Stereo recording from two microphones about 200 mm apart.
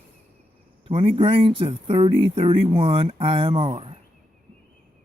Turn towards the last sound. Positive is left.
turn(degrees=-25)  # may be behind; listen again after turning